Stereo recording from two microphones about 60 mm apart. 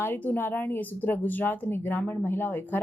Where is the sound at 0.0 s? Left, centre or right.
Left.